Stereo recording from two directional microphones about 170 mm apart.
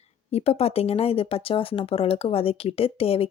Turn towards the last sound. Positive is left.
turn(degrees=35)  # may be behind; listen again after turning